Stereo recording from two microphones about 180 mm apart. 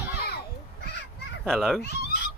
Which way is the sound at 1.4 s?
Centre (ahead or behind).